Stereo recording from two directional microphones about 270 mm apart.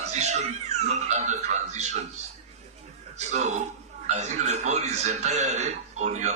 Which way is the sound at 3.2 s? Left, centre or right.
Right.